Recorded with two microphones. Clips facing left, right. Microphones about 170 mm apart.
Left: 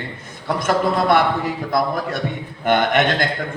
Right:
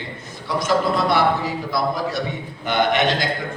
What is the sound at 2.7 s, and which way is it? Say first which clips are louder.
Speech: left 2 dB; 50° left (ahead or behind).